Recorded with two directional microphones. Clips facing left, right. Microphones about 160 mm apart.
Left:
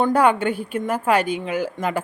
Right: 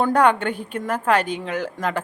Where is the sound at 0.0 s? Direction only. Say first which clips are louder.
Even; 5° left (ahead or behind).